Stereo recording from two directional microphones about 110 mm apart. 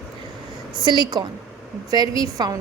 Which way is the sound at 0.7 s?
40° right (ahead or behind).